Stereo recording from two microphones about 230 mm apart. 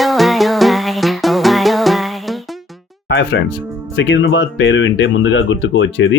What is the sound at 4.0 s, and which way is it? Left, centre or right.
Speech, left.